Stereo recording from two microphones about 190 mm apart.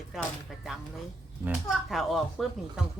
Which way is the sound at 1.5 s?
Centre (ahead or behind).